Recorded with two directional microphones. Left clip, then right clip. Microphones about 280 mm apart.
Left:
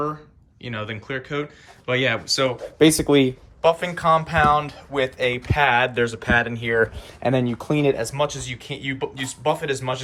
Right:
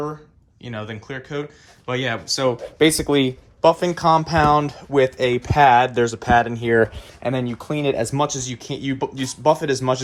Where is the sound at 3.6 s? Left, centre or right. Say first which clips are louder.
Right 3 dB; right.